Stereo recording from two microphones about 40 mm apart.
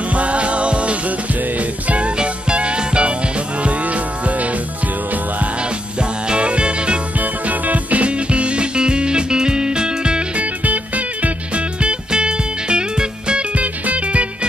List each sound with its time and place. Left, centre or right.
0.1 s music: right
5.9 s music: right
7.2 s music: right
10.4 s music: right
13.6 s music: right